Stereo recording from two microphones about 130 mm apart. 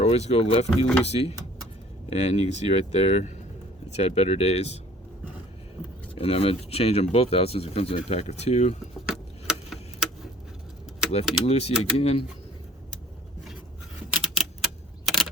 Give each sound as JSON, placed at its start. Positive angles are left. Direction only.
{"t": 0.0, "sound": "speech", "side_deg": 55}
{"t": 6.1, "sound": "speech", "side_deg": 50}
{"t": 9.0, "sound": "a sound", "side_deg": -5}
{"t": 11.4, "sound": "speech", "side_deg": 50}
{"t": 14.1, "sound": "typewriter", "side_deg": 0}
{"t": 15.0, "sound": "a sound", "side_deg": 0}